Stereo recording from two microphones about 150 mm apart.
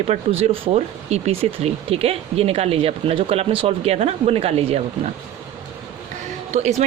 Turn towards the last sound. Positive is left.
turn(degrees=-50)  # may be behind; listen again after turning